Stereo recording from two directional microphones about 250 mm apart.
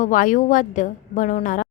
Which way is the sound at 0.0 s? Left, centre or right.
Left.